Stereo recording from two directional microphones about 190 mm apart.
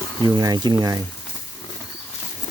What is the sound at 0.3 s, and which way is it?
Speech, 20° right (ahead or behind).